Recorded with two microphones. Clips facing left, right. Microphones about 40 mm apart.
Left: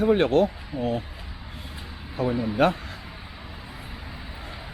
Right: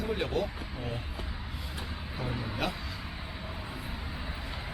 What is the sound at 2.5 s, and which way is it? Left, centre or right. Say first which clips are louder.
Speech: left 13 dB; left.